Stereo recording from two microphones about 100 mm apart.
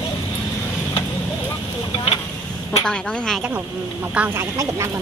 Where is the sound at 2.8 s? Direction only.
10° left (ahead or behind).